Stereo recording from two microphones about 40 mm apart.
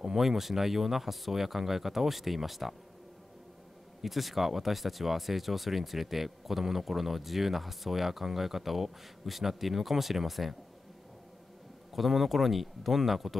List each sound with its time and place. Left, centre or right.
0.0 s speech: centre
4.0 s speech: centre
11.9 s speech: centre